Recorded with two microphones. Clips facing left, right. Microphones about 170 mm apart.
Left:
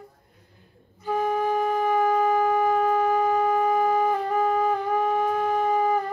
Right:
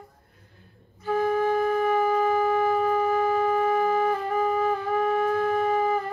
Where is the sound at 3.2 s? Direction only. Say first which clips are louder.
Left 1 dB; 15° left (ahead or behind).